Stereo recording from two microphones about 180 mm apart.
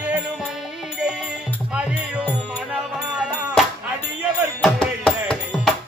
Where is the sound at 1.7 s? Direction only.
5° right (ahead or behind).